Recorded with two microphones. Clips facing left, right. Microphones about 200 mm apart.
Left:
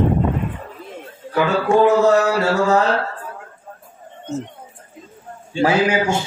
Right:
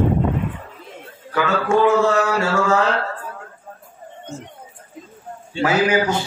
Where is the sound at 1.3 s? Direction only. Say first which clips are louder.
Left 2 dB; 35° left (ahead or behind).